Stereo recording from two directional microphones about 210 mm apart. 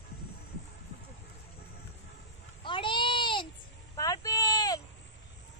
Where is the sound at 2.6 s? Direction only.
25° left (ahead or behind).